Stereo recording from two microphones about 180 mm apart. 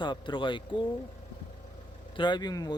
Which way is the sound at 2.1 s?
25° left (ahead or behind).